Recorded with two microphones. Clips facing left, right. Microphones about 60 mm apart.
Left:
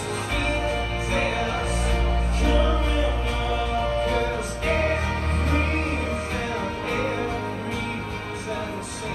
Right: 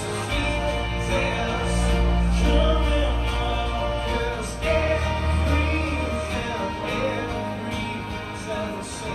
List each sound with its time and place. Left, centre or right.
2.4 s music: left